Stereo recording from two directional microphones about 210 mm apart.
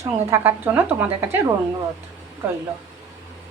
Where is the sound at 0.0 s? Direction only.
10° right (ahead or behind).